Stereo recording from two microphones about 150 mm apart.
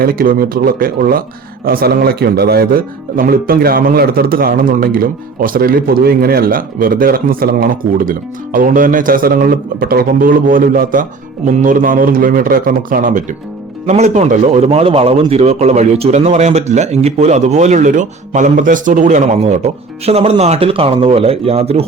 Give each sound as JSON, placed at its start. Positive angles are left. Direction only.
{"t": 0.0, "sound": "a man's voice", "side_deg": -80}
{"t": 13.8, "sound": "speech", "side_deg": -50}